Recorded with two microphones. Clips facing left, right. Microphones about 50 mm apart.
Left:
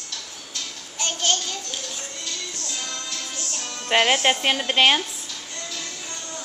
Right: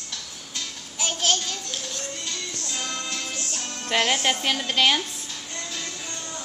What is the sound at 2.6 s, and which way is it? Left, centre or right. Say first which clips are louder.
Music: right 1 dB; right.